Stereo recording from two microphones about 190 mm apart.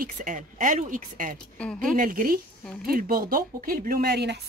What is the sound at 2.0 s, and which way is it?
Speech, 45° right (ahead or behind).